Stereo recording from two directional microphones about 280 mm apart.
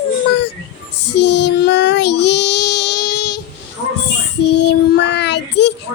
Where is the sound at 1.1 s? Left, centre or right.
Left.